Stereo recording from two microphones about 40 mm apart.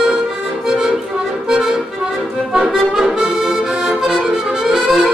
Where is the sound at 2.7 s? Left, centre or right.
Centre.